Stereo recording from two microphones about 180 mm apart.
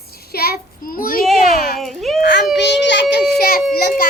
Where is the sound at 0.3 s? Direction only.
55° left (ahead or behind).